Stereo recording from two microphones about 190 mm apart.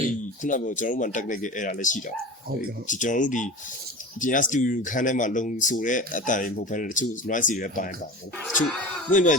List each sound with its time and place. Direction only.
0.4 s speech: 45° left (ahead or behind)
9.1 s speech: 40° left (ahead or behind)